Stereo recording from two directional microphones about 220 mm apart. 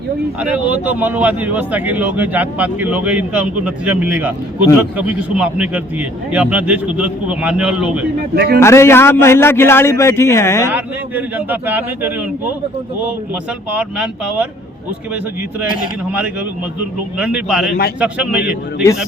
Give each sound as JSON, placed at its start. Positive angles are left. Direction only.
{"t": 0.3, "sound": "a man's voice", "side_deg": -5}
{"t": 8.4, "sound": "speech", "side_deg": -45}
{"t": 8.6, "sound": "a man's voice", "side_deg": 10}
{"t": 10.7, "sound": "speech", "side_deg": -10}
{"t": 13.7, "sound": "a man's voice", "side_deg": -5}
{"t": 17.2, "sound": "a man's voice", "side_deg": -5}